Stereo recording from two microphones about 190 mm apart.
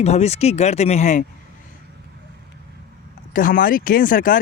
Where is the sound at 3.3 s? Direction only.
45° left (ahead or behind).